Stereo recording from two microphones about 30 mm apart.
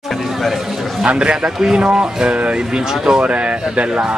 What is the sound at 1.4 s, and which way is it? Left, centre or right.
Speech, centre.